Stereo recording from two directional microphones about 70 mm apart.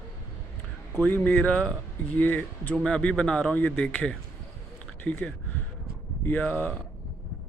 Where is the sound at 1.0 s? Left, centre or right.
Left.